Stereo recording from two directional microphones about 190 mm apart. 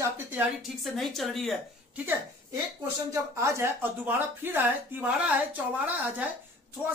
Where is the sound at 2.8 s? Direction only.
15° right (ahead or behind).